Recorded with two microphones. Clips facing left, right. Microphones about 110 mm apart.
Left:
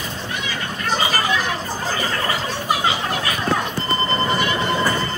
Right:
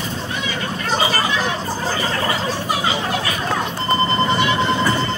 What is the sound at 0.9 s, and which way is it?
Chatter, 35° right (ahead or behind).